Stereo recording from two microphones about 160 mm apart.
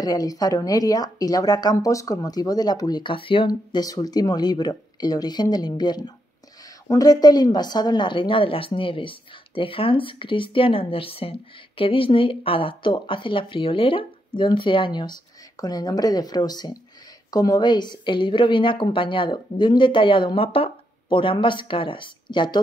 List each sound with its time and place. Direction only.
0.0 s a woman's voice: 25° left (ahead or behind)